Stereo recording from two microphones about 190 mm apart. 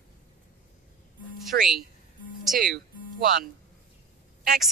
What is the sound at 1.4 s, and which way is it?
Speech, centre (ahead or behind).